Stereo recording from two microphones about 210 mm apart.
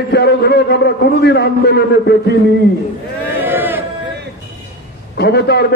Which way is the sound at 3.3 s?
10° right (ahead or behind).